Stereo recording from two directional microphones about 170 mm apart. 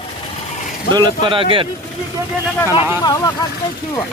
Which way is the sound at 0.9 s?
25° right (ahead or behind).